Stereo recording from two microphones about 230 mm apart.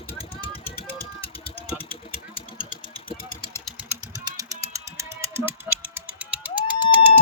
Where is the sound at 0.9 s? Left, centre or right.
Left.